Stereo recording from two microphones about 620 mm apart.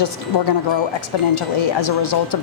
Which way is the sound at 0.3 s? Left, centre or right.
Left.